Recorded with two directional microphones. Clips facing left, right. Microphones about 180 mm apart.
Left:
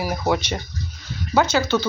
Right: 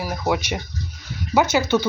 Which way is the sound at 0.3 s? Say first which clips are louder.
Even; 10° right (ahead or behind).